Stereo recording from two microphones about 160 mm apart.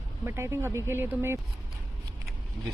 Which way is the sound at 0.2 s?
15° right (ahead or behind).